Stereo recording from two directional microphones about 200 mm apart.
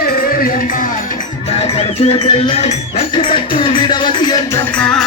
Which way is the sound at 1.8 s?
30° left (ahead or behind).